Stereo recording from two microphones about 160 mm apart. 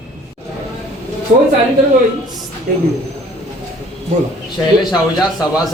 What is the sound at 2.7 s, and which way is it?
Speech, 55° right (ahead or behind).